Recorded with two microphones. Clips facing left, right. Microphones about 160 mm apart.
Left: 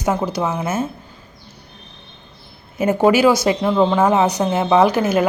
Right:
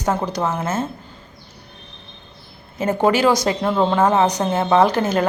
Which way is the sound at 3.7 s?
Centre (ahead or behind).